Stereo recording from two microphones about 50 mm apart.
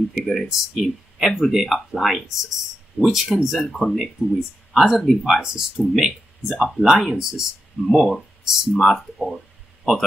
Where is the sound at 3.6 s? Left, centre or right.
Centre.